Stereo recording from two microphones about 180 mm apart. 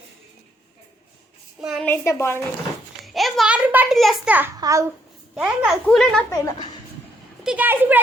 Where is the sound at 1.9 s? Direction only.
15° left (ahead or behind).